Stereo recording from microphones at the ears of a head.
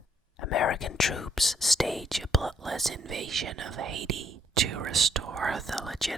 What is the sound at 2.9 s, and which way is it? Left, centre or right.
Speech, right.